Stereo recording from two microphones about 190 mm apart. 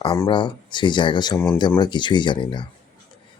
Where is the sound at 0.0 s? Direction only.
25° left (ahead or behind).